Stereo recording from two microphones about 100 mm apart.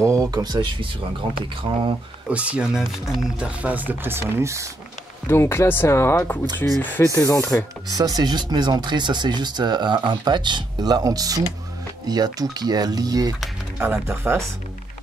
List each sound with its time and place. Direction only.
0.0 s speech: 35° right (ahead or behind)
1.6 s speech: 60° right (ahead or behind)
2.2 s speech: 15° right (ahead or behind); by 4.6 s 30° right (ahead or behind)
5.2 s speech: 25° left (ahead or behind)
7.2 s speech: 35° left (ahead or behind)
7.9 s speech: 40° right (ahead or behind)
13.7 s speech: 20° right (ahead or behind)